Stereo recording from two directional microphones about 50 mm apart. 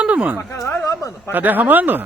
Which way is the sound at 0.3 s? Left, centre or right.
Left.